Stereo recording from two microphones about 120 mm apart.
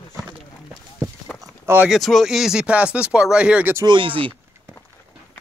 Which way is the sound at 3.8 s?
45° right (ahead or behind).